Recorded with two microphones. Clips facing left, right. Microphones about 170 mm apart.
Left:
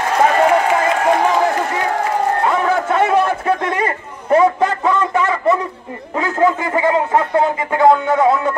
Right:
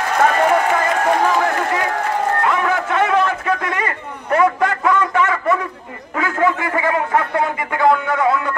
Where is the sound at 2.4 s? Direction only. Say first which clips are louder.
Left 2 dB; 30° left (ahead or behind).